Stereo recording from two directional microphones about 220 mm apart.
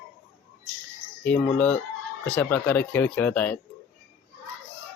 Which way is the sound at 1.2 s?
5° left (ahead or behind).